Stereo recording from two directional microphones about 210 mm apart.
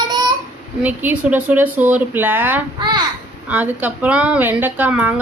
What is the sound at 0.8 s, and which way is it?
A woman's voice, 5° right (ahead or behind).